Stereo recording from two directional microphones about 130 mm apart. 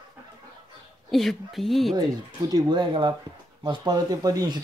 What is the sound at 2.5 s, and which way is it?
Speech, 30° right (ahead or behind).